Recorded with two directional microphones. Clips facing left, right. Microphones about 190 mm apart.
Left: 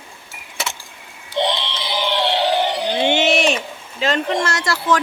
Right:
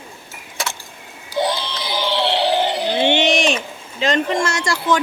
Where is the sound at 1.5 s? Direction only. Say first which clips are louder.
Even; 20° left (ahead or behind).